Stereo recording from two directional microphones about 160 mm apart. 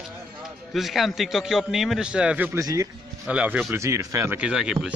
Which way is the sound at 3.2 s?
10° right (ahead or behind).